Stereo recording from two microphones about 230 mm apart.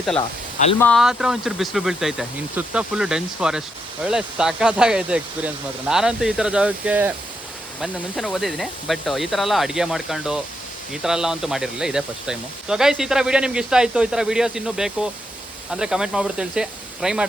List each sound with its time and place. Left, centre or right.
0.2 s speech: left
0.8 s speech: centre